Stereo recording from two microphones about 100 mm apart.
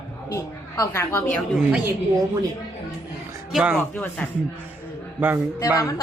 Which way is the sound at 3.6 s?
10° right (ahead or behind).